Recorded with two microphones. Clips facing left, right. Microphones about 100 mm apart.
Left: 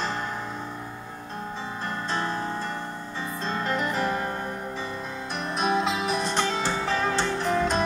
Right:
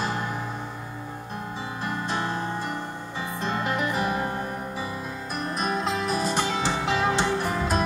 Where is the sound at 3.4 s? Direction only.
15° right (ahead or behind).